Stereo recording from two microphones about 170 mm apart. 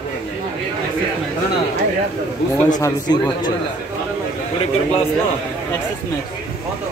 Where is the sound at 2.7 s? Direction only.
25° left (ahead or behind).